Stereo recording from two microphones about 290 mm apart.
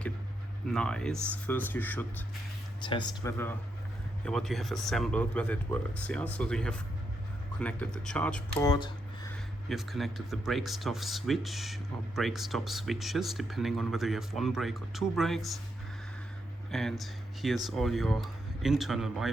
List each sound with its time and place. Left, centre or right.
0.7 s speech: centre
9.6 s speech: centre
16.7 s speech: centre